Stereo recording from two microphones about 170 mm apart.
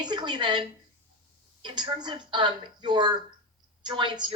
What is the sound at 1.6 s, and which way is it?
A woman's voice, 25° right (ahead or behind).